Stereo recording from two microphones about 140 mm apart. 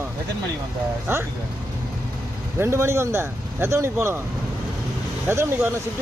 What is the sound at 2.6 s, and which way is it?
Speech, 20° right (ahead or behind).